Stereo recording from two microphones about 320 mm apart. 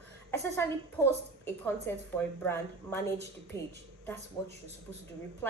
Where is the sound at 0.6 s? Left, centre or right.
Centre.